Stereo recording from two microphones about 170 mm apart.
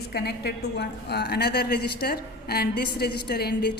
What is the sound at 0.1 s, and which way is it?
A woman's voice, 70° left (ahead or behind).